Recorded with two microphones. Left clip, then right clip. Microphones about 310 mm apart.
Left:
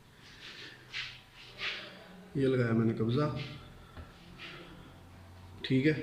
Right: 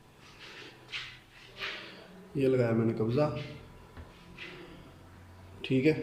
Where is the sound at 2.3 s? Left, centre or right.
Centre.